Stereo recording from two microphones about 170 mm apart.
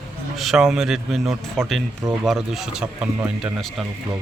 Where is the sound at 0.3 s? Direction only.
Centre (ahead or behind).